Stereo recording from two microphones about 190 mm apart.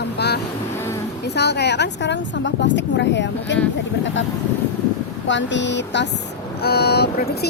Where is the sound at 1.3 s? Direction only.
60° left (ahead or behind).